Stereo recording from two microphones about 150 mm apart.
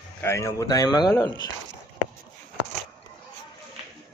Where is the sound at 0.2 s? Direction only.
20° left (ahead or behind).